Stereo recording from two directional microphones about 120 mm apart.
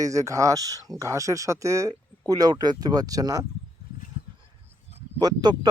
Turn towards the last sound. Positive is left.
turn(degrees=-35)  # may be behind; listen again after turning